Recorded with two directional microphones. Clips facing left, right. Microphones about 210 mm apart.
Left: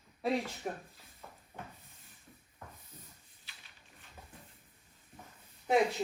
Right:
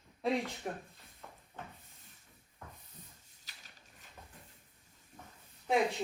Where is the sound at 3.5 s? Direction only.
40° right (ahead or behind).